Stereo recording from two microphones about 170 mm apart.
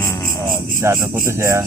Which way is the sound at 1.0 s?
15° right (ahead or behind).